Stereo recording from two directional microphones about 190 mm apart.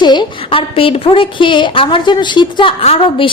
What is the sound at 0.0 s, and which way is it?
A woman's voice, 25° left (ahead or behind).